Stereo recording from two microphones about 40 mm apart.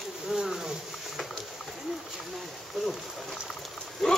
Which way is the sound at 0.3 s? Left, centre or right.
Centre.